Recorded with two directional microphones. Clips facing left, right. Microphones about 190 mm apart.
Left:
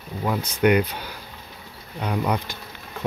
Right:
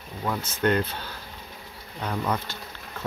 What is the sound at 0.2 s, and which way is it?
Speech, 15° left (ahead or behind).